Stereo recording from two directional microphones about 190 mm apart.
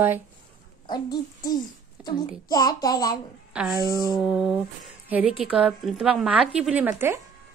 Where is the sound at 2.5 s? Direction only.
20° left (ahead or behind).